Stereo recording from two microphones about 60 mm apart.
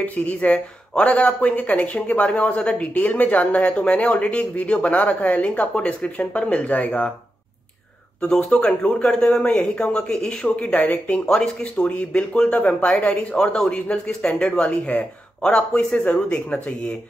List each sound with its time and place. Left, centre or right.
0.0 s speech: left
8.2 s speech: centre